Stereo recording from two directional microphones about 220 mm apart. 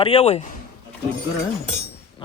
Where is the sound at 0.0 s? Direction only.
25° left (ahead or behind).